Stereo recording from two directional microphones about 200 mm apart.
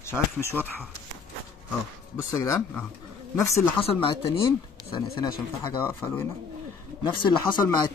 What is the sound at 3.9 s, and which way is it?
Speech, 25° left (ahead or behind).